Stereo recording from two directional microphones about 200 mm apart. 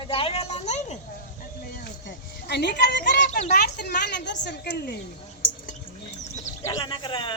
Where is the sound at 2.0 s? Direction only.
60° left (ahead or behind); by 3.5 s 40° left (ahead or behind).